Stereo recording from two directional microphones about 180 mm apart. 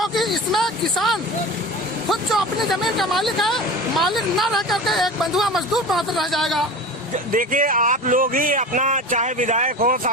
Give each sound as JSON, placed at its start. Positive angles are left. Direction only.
{"t": 0.0, "sound": "a sound", "side_deg": 0}
{"t": 2.0, "sound": "speech", "side_deg": 0}
{"t": 7.3, "sound": "speech", "side_deg": -50}